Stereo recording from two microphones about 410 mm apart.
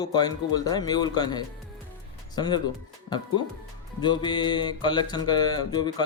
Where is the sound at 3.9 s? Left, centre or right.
Centre.